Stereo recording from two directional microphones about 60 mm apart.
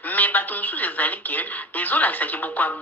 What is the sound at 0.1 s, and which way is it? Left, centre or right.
A woman's voice, left.